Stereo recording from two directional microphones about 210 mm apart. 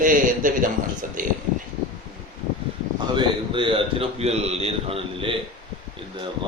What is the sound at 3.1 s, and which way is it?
A man's voice, 25° right (ahead or behind).